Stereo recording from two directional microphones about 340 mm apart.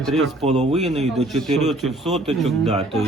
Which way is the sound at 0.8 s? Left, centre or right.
Centre.